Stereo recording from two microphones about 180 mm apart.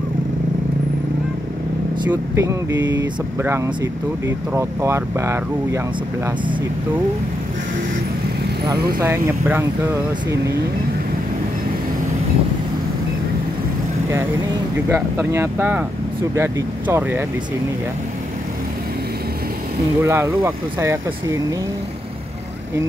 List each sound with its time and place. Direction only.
2.0 s speech: 15° right (ahead or behind)
8.7 s speech: 60° right (ahead or behind)
14.9 s speech: 15° right (ahead or behind)
20.0 s speech: 15° right (ahead or behind)